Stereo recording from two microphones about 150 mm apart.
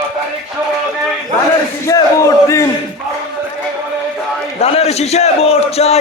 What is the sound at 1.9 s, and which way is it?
Speech, 20° left (ahead or behind).